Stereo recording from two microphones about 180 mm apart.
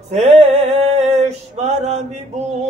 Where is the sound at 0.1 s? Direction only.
35° right (ahead or behind).